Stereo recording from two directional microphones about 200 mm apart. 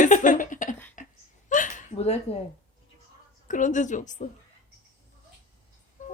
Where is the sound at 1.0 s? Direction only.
40° left (ahead or behind).